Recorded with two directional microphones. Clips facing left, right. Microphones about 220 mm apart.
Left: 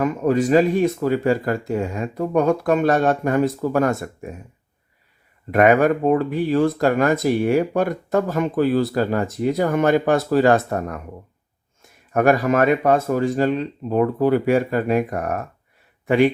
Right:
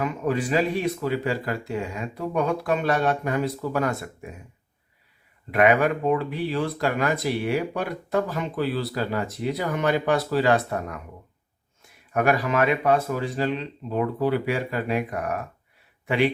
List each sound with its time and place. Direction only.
0.0 s speech: 45° left (ahead or behind)
5.5 s speech: 45° left (ahead or behind)